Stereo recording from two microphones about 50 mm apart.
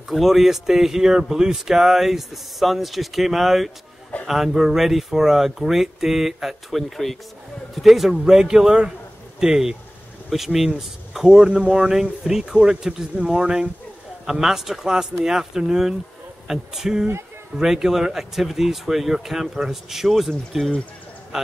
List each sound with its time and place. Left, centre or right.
0.1 s speech: centre